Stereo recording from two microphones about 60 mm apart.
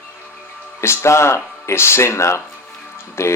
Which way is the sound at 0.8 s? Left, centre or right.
Left.